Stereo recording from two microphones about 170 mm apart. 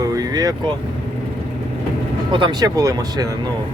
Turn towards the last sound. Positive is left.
turn(degrees=-20)  # may be behind; listen again after turning